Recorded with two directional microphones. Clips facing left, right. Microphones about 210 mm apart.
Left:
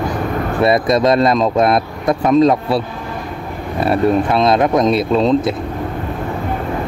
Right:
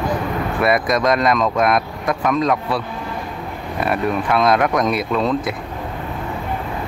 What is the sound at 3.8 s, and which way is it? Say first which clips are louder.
Speech: left 6 dB; 30° left (ahead or behind).